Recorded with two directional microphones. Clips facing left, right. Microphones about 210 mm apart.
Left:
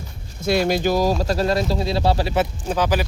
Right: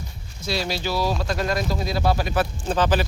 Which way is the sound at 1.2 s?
35° left (ahead or behind).